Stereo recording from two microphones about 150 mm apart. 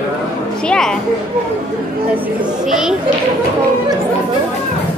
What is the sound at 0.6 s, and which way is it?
Speech, 5° left (ahead or behind).